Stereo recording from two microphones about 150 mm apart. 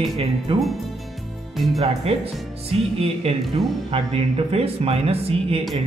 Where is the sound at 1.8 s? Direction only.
40° right (ahead or behind).